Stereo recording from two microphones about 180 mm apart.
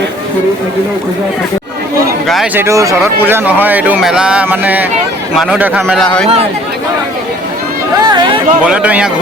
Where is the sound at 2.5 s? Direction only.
15° right (ahead or behind).